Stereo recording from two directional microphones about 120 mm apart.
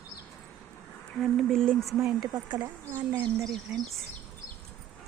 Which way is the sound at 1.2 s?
Centre (ahead or behind).